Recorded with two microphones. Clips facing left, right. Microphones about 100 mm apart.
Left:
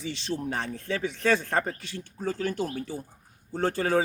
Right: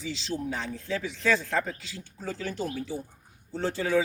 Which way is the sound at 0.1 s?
55° left (ahead or behind).